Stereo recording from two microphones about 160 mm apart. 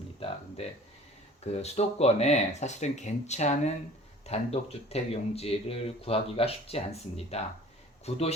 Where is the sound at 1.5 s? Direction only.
40° left (ahead or behind).